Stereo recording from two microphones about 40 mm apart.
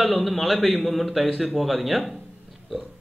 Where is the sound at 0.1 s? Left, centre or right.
Centre.